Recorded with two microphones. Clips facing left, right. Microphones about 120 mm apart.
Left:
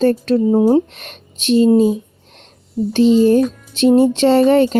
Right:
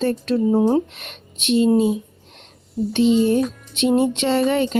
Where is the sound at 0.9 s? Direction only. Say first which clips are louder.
Left 2 dB; 40° left (ahead or behind).